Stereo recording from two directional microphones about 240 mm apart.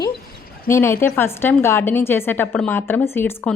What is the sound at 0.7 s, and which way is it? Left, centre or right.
A woman's voice, centre.